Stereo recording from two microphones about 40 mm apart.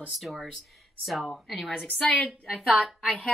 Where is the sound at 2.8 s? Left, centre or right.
Right.